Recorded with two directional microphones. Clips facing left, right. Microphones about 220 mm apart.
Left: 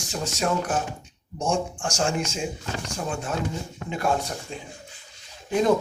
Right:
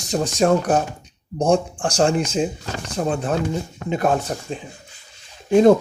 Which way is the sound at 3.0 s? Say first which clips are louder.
Right 10 dB; 50° right (ahead or behind).